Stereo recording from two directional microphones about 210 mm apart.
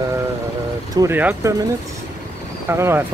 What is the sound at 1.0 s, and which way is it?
Speech, 10° right (ahead or behind).